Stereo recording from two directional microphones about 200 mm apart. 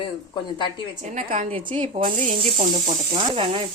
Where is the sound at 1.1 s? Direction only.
40° right (ahead or behind).